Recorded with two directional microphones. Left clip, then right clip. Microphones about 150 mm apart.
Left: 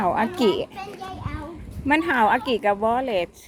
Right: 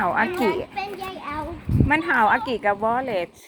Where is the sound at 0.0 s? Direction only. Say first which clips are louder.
Even; 40° left (ahead or behind).